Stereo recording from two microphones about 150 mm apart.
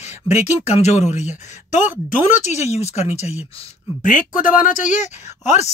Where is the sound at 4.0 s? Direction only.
60° left (ahead or behind).